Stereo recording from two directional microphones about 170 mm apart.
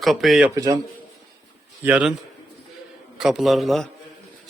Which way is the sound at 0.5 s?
20° right (ahead or behind).